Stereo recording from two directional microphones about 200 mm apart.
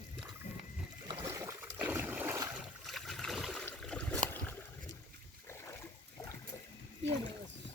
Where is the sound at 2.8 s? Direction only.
Centre (ahead or behind).